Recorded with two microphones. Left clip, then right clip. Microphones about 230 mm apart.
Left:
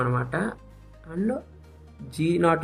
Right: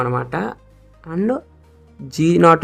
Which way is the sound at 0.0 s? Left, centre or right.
Right.